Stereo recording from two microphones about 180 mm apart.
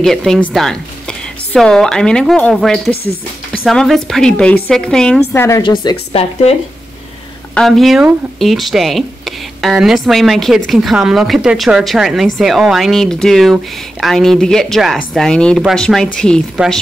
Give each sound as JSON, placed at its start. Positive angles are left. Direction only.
{"t": 0.0, "sound": "speech", "side_deg": 0}
{"t": 5.6, "sound": "speech", "side_deg": 25}
{"t": 7.5, "sound": "speech", "side_deg": 0}